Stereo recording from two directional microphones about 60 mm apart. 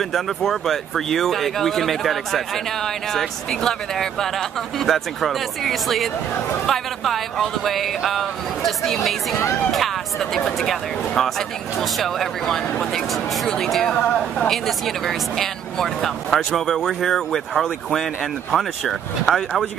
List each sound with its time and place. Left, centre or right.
0.0 s speech: centre
13.9 s speech: centre
14.5 s speech: centre